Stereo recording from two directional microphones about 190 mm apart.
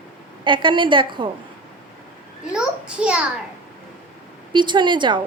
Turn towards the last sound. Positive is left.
turn(degrees=-25)  # may be behind; listen again after turning